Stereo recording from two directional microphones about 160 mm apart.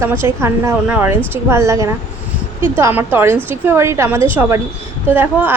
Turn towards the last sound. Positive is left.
turn(degrees=-15)  # may be behind; listen again after turning